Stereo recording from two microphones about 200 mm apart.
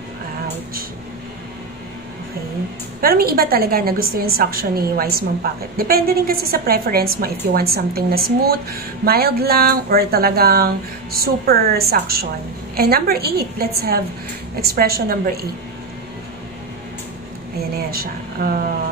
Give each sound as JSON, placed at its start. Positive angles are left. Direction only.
{"t": 3.0, "sound": "a woman's voice", "side_deg": -50}
{"t": 18.4, "sound": "a woman's voice", "side_deg": -50}